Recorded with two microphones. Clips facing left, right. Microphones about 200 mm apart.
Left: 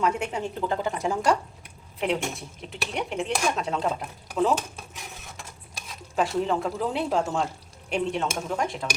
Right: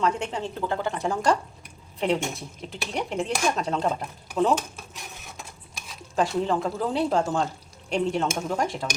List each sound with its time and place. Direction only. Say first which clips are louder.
0.0 s speech: even; 10° left (ahead or behind)
2.0 s speech: right 2 dB; centre (ahead or behind)
6.1 s speech: right 1 dB; centre (ahead or behind)